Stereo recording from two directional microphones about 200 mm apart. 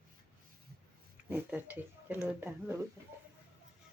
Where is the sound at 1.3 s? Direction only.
10° right (ahead or behind).